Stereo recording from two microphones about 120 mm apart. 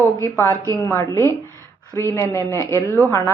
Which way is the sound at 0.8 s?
25° left (ahead or behind).